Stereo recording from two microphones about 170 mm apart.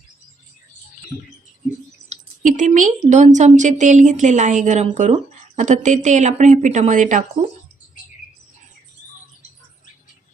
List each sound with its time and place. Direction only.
2.0 s speech: 45° right (ahead or behind)